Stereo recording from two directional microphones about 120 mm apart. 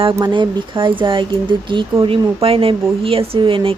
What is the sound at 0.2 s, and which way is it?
Speech, 40° right (ahead or behind).